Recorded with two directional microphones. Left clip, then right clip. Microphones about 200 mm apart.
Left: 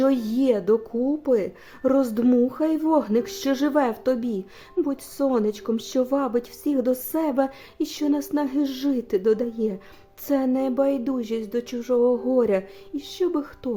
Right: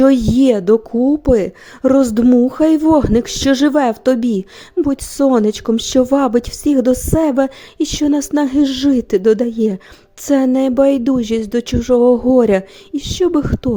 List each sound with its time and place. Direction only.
0.0 s a woman's voice: 35° right (ahead or behind)